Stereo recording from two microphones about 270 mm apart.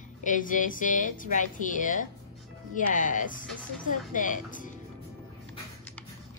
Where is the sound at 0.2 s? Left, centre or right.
Left.